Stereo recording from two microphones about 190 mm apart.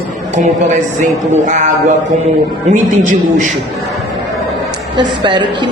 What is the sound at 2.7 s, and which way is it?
Speech, 40° right (ahead or behind).